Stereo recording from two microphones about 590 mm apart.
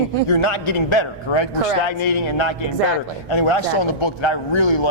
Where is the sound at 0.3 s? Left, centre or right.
Left.